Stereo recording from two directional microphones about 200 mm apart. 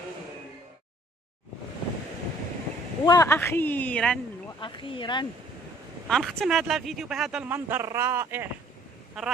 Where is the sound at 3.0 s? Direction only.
15° left (ahead or behind).